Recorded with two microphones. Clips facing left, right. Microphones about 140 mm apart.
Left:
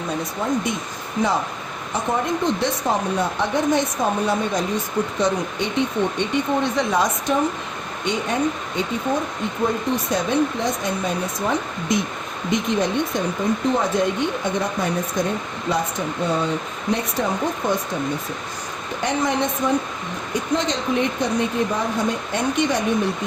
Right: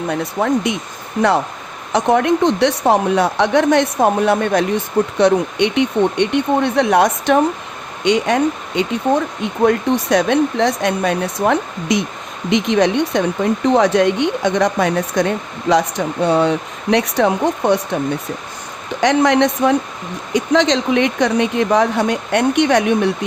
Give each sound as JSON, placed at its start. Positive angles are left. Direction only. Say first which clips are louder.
{"t": 0.1, "sound": "a woman's voice", "louder": "right 6 dB", "side_deg": -65}
{"t": 1.9, "sound": "a woman's voice", "louder": "right 9 dB", "side_deg": -80}
{"t": 8.0, "sound": "speech", "louder": "right 7 dB", "side_deg": -90}
{"t": 9.6, "sound": "a woman's voice", "louder": "right 8 dB", "side_deg": -80}
{"t": 12.5, "sound": "a woman's voice", "louder": "right 7 dB", "side_deg": -90}
{"t": 19.0, "sound": "a woman's voice", "louder": "right 9 dB", "side_deg": -75}
{"t": 20.3, "sound": "a woman's voice", "louder": "right 8 dB", "side_deg": -90}